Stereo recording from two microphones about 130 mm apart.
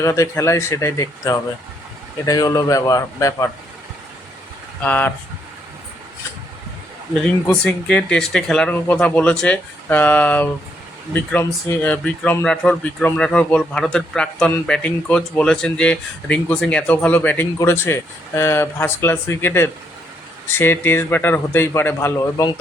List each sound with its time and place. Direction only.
0.0 s speech: 20° left (ahead or behind)
4.8 s speech: 10° left (ahead or behind)
7.4 s speech: 10° left (ahead or behind)